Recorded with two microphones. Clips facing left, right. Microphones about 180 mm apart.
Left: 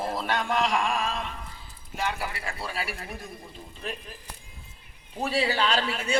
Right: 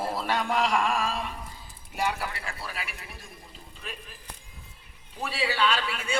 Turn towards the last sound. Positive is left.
turn(degrees=40)  # may be behind; listen again after turning